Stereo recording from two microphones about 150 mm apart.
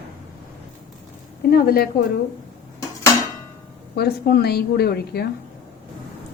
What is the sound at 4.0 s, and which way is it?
A woman's voice, 90° left.